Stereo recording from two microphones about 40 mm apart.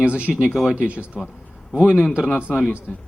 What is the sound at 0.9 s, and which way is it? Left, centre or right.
Speech, right.